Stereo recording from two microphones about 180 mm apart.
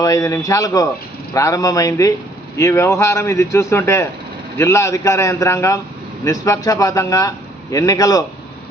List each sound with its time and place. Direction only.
0.0 s a man's voice: 20° left (ahead or behind)